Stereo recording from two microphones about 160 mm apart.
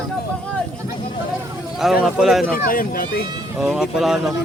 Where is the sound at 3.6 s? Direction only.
5° right (ahead or behind).